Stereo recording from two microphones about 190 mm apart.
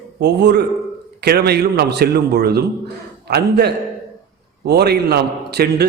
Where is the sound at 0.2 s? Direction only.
60° right (ahead or behind).